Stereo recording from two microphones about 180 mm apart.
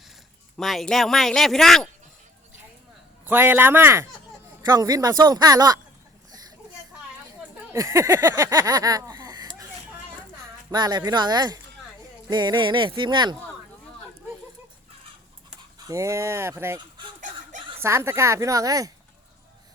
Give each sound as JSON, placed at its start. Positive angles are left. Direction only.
{"t": 0.5, "sound": "a man's voice", "side_deg": 0}
{"t": 3.2, "sound": "speech", "side_deg": -10}
{"t": 7.7, "sound": "a sound", "side_deg": -15}
{"t": 10.7, "sound": "speech", "side_deg": -25}
{"t": 15.9, "sound": "speech", "side_deg": -15}